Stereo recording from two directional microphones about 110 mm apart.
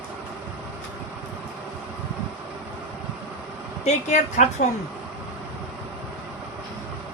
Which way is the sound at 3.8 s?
90° left.